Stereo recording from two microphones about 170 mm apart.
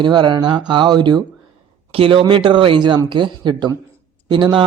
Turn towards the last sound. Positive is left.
turn(degrees=-30)  # may be behind; listen again after turning